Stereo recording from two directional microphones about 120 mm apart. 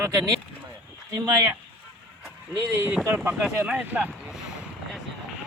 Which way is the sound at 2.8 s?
15° right (ahead or behind).